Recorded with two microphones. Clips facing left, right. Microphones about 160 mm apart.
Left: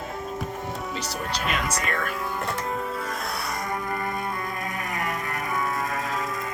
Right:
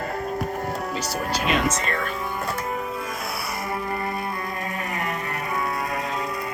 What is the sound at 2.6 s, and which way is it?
Music, 5° right (ahead or behind).